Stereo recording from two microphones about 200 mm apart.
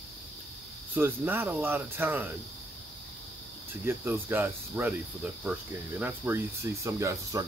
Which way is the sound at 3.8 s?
10° right (ahead or behind).